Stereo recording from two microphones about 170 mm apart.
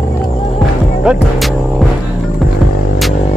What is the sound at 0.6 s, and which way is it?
Music, centre (ahead or behind).